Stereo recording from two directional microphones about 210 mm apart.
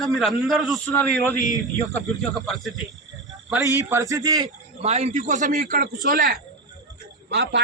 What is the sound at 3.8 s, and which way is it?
A man's voice, 15° right (ahead or behind).